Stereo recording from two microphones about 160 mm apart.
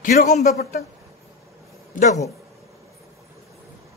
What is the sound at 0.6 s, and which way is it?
Speech, 75° left (ahead or behind).